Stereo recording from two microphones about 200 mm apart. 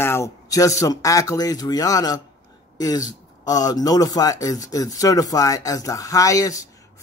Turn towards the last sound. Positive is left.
turn(degrees=15)  # may be behind; listen again after turning